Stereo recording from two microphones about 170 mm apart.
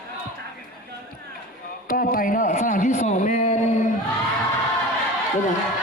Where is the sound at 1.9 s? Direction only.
55° left (ahead or behind).